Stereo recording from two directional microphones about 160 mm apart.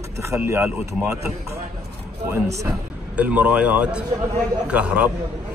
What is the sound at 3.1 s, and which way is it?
Speech, 10° right (ahead or behind).